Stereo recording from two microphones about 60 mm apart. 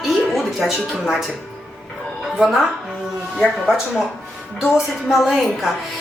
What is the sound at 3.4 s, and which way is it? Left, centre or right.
Speech, centre.